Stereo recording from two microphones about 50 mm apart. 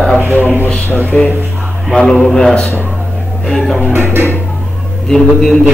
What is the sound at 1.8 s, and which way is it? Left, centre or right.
A man's voice, centre.